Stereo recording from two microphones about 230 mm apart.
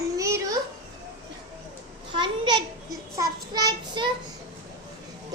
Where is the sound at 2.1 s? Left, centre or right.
Centre.